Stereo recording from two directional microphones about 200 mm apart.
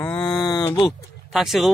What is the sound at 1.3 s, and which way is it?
Speech, centre (ahead or behind).